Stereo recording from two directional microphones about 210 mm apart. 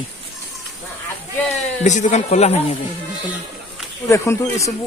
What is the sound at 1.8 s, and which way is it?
Speech, 35° left (ahead or behind).